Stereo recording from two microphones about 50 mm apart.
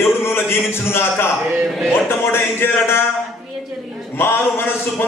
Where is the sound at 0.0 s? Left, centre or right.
Left.